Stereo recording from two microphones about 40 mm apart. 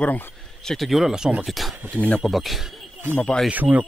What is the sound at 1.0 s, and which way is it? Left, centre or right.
Speech, centre.